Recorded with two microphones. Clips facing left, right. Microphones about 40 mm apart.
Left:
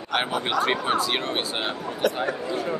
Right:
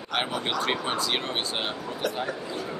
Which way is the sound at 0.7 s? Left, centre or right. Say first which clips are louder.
Left 4 dB; centre.